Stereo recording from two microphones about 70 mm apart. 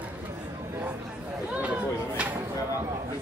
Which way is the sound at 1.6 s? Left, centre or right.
Centre.